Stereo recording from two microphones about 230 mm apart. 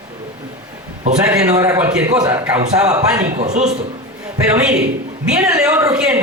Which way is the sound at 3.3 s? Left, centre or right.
Right.